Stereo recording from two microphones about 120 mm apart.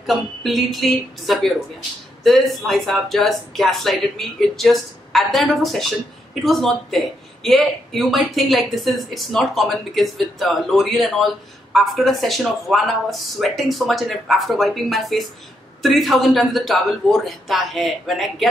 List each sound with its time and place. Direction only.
0.0 s speech: centre (ahead or behind)